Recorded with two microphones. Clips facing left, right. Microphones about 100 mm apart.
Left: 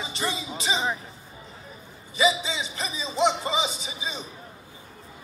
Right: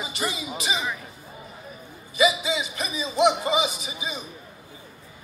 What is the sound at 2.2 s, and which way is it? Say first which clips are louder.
Music: right 2 dB; 30° left (ahead or behind).